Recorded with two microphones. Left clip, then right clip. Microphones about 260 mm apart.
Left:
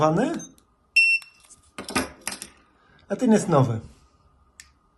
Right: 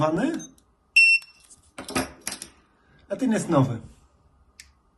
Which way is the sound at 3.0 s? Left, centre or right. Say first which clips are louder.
Left 4 dB; left.